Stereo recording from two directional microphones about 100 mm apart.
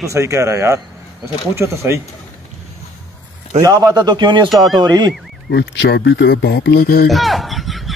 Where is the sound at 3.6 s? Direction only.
35° right (ahead or behind).